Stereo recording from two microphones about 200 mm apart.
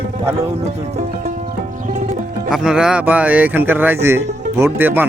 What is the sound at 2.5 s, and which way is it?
Speech, 5° right (ahead or behind).